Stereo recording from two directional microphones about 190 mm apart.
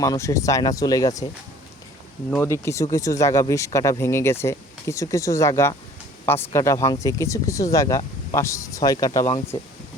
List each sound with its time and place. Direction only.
0.0 s speech: 15° left (ahead or behind)
2.3 s speech: 15° left (ahead or behind)